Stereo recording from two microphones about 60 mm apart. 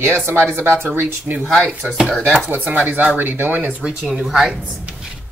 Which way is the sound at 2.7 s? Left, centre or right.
Right.